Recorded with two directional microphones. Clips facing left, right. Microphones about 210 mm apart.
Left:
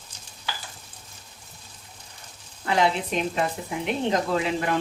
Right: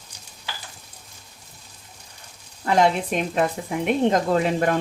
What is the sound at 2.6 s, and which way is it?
Speech, 45° right (ahead or behind).